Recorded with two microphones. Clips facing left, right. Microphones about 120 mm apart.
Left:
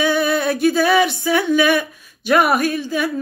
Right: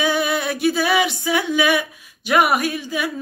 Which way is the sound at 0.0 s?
15° right (ahead or behind).